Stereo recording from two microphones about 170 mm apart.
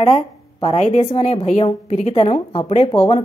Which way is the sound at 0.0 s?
35° left (ahead or behind).